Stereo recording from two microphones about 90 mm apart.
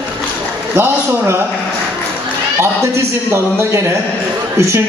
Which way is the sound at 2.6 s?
30° right (ahead or behind).